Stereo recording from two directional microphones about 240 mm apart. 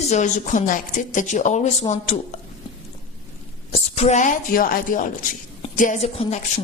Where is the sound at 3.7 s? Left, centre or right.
Left.